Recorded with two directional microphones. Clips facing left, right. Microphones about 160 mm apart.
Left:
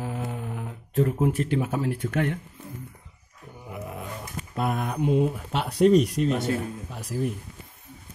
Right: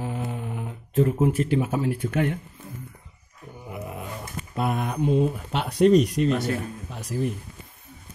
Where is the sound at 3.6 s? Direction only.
5° right (ahead or behind).